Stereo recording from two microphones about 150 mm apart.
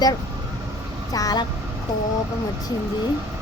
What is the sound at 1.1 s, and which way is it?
Speech, 25° left (ahead or behind).